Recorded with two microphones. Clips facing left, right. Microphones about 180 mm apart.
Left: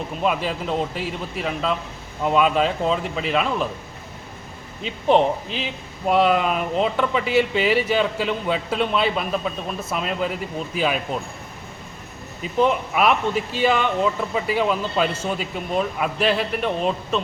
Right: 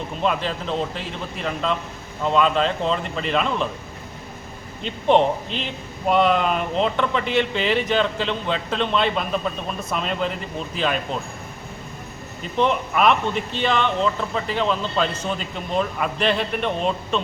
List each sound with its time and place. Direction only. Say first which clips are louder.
0.2 s speech: even; 5° left (ahead or behind)
4.8 s speech: even; 5° left (ahead or behind)
12.4 s speech: left 1 dB; 5° left (ahead or behind)